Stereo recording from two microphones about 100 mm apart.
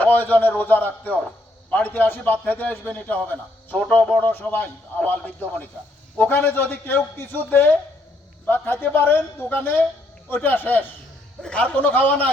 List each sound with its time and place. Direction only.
0.0 s a man's voice: 15° left (ahead or behind)